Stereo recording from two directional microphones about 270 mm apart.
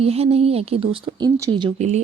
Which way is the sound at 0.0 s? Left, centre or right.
Right.